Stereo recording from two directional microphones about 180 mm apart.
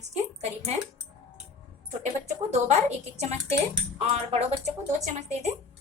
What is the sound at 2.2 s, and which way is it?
Speech, 40° right (ahead or behind).